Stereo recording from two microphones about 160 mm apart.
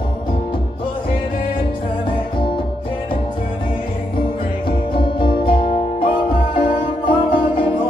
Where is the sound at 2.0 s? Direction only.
30° left (ahead or behind).